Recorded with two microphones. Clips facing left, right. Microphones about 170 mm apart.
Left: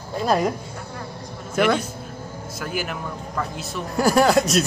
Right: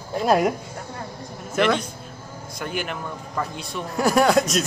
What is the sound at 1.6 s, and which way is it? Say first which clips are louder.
Speech: left 1 dB; 5° left (ahead or behind).